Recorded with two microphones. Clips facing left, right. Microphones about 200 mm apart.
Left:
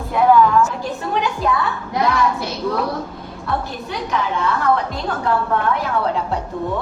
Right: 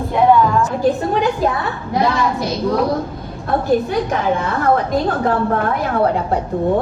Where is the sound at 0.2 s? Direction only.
35° right (ahead or behind).